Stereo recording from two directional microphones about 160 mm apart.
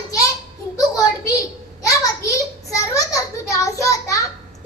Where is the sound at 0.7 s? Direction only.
20° left (ahead or behind).